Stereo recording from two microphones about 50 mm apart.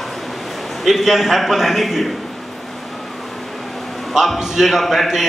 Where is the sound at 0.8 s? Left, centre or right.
Centre.